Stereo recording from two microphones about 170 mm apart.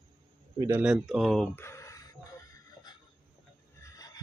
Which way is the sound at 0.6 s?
10° right (ahead or behind).